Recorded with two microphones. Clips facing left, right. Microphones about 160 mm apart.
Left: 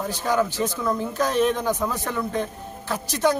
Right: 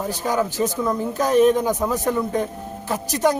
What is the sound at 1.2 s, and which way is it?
Speech, 45° right (ahead or behind).